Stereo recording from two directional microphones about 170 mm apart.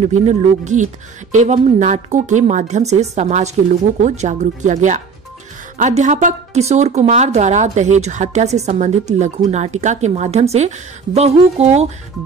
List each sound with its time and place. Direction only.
0.0 s a woman's voice: 45° right (ahead or behind)